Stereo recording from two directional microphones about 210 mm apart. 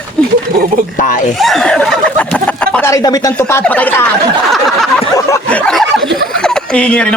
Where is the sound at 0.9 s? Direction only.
40° left (ahead or behind).